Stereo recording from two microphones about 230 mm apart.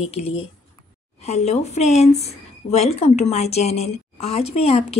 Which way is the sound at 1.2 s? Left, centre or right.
Left.